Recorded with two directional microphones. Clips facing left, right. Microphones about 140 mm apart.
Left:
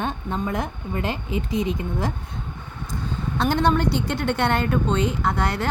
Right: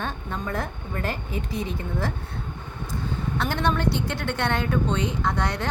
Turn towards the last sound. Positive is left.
turn(degrees=10)  # may be behind; listen again after turning